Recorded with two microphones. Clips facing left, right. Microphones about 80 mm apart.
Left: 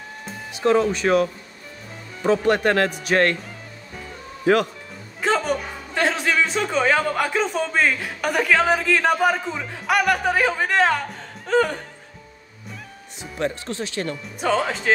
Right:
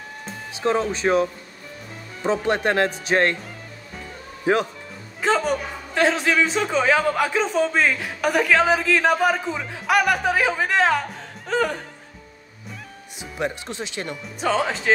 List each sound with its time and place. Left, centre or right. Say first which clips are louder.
0.9 s speech: left 1 dB; right
4.5 s speech: left 2 dB; right
5.2 s a man's voice: right 1 dB; centre
11.4 s music: left 3 dB; centre
13.2 s speech: left 1 dB; centre
14.1 s a man's voice: even; centre